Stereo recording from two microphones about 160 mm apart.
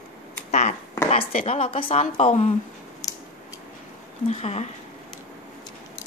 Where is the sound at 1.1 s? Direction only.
40° left (ahead or behind).